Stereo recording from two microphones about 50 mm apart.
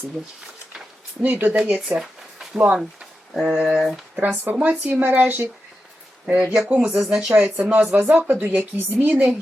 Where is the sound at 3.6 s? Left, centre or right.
Centre.